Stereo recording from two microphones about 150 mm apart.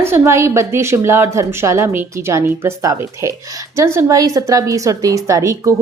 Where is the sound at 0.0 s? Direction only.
15° right (ahead or behind).